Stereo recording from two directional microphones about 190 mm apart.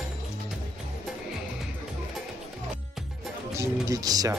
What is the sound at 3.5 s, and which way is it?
Speech, 15° right (ahead or behind).